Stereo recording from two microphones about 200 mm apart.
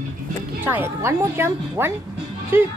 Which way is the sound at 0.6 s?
10° right (ahead or behind).